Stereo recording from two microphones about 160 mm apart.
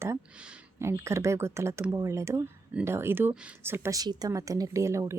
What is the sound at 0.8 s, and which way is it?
Speech, 15° right (ahead or behind).